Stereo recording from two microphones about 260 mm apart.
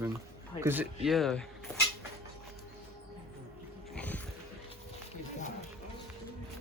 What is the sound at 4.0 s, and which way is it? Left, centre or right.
Music, centre.